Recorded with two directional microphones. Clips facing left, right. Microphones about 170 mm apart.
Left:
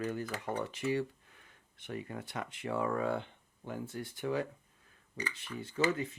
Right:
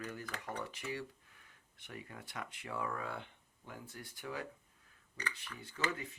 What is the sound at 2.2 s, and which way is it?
Speech, 25° left (ahead or behind).